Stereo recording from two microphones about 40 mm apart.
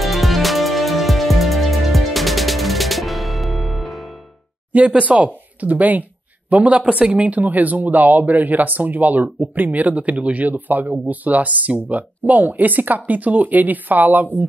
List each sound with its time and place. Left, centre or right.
0.0 s music: centre
4.7 s speech: right